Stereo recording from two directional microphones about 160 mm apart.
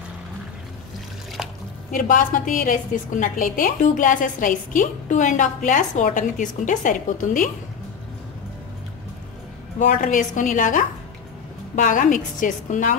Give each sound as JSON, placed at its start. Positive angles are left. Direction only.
{"t": 1.9, "sound": "a woman's voice", "side_deg": 55}
{"t": 9.8, "sound": "a woman's voice", "side_deg": 50}